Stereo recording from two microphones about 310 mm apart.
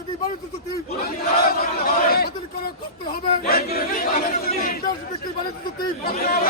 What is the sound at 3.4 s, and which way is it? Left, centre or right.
Speech, left.